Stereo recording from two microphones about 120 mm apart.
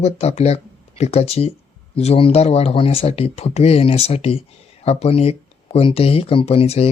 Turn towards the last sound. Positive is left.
turn(degrees=55)  # may be behind; listen again after turning